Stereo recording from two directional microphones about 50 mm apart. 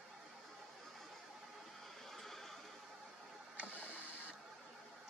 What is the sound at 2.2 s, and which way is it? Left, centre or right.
Neigh, centre.